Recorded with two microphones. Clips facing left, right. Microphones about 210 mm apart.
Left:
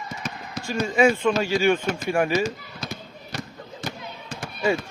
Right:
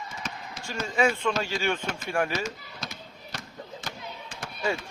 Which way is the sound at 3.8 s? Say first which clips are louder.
Left 11 dB; 40° left (ahead or behind).